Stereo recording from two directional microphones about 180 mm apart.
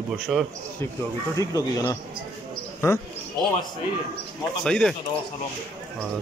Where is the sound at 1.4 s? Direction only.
20° left (ahead or behind).